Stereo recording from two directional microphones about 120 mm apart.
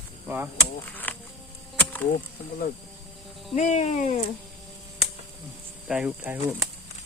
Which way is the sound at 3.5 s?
75° left (ahead or behind).